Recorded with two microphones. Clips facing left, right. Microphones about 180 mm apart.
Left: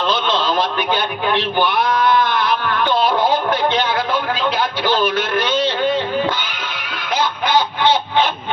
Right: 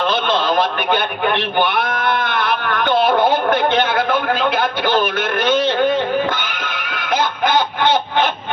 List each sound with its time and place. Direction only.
0.0 s a man's voice: 55° right (ahead or behind)
6.9 s chicken: 55° right (ahead or behind)